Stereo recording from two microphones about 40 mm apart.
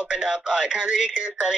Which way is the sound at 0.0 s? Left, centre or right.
Right.